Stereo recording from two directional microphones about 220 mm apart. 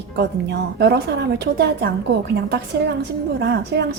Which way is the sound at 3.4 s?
50° right (ahead or behind).